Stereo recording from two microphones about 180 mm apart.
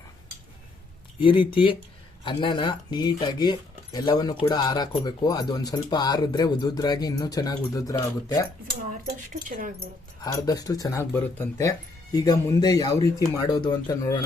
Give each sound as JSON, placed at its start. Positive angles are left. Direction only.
{"t": 1.2, "sound": "speech", "side_deg": 30}
{"t": 8.9, "sound": "speech", "side_deg": -45}
{"t": 10.4, "sound": "speech", "side_deg": 20}